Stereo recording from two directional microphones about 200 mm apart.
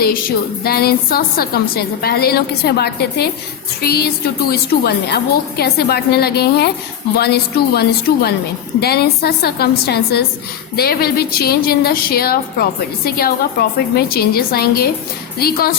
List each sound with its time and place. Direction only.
0.6 s a woman's voice: 50° left (ahead or behind)